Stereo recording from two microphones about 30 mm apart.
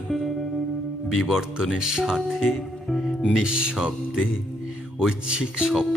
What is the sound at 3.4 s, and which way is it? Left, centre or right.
Music, right.